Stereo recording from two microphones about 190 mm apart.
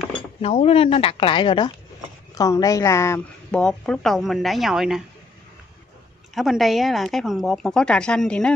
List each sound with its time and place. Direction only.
0.4 s speech: 30° left (ahead or behind); by 3.6 s 15° left (ahead or behind)
3.6 s a woman's voice: 5° left (ahead or behind)
6.3 s a woman's voice: centre (ahead or behind)